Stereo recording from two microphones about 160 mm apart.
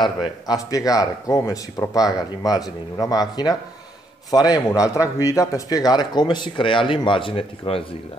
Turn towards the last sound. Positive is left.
turn(degrees=35)  # may be behind; listen again after turning